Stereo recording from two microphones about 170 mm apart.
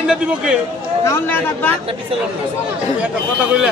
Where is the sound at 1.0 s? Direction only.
15° left (ahead or behind).